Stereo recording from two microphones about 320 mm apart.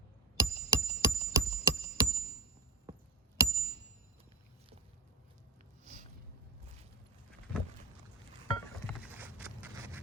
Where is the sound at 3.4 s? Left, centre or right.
Centre.